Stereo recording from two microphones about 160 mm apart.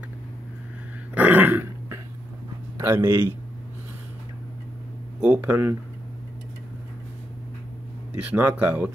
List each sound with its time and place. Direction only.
1.1 s dog: 10° right (ahead or behind)
2.8 s speech: 20° right (ahead or behind)
5.2 s speech: 10° right (ahead or behind)
8.2 s speech: 10° right (ahead or behind)